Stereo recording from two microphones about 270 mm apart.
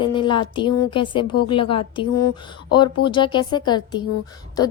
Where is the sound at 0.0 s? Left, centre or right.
Centre.